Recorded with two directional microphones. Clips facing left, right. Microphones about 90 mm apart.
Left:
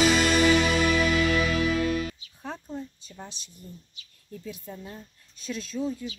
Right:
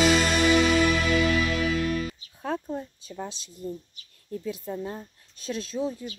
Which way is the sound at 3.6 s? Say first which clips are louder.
Right 12 dB; 45° right (ahead or behind).